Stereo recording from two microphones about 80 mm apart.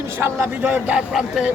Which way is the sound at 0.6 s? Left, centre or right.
Centre.